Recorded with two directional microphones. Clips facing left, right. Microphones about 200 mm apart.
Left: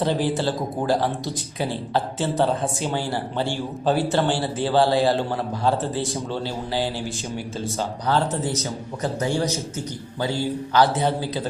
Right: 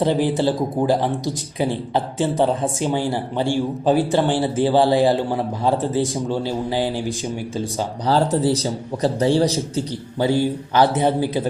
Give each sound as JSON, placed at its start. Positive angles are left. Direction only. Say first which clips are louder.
{"t": 0.0, "sound": "speech", "louder": "right 4 dB", "side_deg": -15}
{"t": 8.0, "sound": "a man's voice", "louder": "right 6 dB", "side_deg": -35}
{"t": 10.8, "sound": "speech", "louder": "right 3 dB", "side_deg": -15}